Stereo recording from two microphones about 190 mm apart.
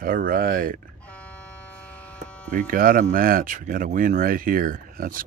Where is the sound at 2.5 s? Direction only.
45° right (ahead or behind).